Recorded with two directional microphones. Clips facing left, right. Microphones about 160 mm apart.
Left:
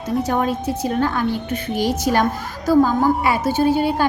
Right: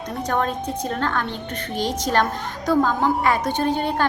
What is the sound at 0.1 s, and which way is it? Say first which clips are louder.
A woman's voice: left 4 dB; 10° left (ahead or behind).